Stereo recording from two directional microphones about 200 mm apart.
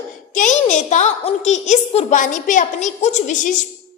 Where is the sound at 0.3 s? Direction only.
35° left (ahead or behind).